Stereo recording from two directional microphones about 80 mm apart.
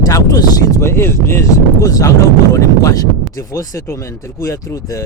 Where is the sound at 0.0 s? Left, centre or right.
Left.